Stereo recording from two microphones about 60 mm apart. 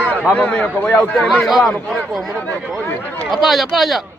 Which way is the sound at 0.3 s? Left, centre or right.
Centre.